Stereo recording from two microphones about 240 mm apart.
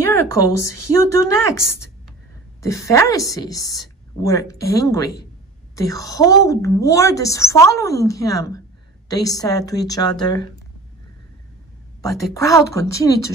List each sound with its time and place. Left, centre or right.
0.5 s speech: left
1.1 s a woman's voice: centre
12.0 s a woman's voice: centre